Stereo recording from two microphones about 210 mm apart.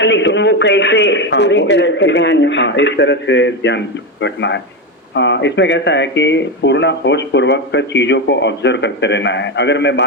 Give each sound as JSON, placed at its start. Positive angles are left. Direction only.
{"t": 0.0, "sound": "speech", "side_deg": 55}